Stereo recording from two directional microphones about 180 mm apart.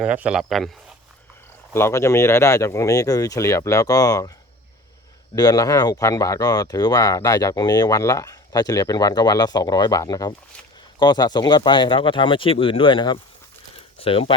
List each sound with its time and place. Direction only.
0.0 s speech: 5° right (ahead or behind)
1.7 s speech: 15° left (ahead or behind)
5.3 s speech: 20° left (ahead or behind)